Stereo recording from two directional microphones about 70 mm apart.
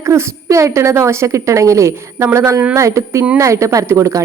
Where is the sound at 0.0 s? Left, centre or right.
Right.